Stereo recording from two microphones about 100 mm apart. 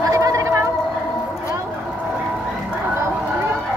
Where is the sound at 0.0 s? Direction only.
35° right (ahead or behind).